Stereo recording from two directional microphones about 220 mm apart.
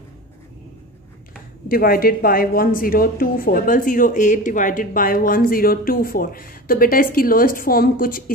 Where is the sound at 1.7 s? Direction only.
40° left (ahead or behind).